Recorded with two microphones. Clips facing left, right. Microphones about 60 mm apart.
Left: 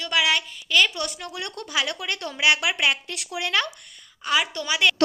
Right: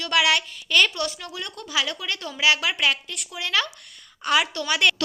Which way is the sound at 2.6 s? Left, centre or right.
Centre.